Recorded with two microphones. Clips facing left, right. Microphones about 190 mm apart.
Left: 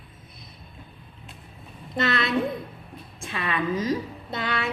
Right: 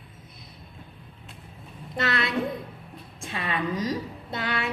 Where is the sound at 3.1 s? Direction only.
30° right (ahead or behind).